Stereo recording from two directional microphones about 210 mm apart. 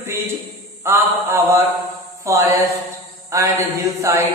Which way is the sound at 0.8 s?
10° right (ahead or behind).